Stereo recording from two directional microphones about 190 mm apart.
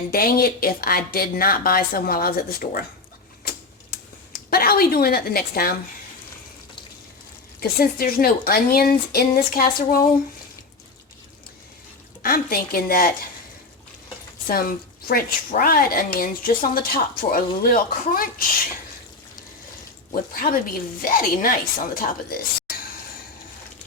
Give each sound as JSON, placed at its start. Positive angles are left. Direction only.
{"t": 0.1, "sound": "a woman's voice", "side_deg": 50}
{"t": 4.4, "sound": "a woman's voice", "side_deg": 50}
{"t": 7.6, "sound": "a woman's voice", "side_deg": 50}
{"t": 12.2, "sound": "a woman's voice", "side_deg": 50}
{"t": 14.4, "sound": "a woman's voice", "side_deg": 50}
{"t": 20.3, "sound": "a woman's voice", "side_deg": 50}